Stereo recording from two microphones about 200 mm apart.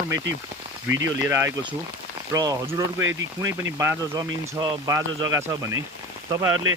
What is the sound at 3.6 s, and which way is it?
Speech, 15° right (ahead or behind).